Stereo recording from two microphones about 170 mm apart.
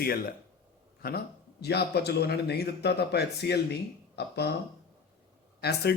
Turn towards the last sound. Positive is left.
turn(degrees=70)  # may be behind; listen again after turning